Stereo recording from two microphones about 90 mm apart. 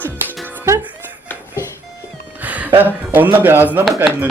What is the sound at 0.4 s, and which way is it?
Music, 25° right (ahead or behind).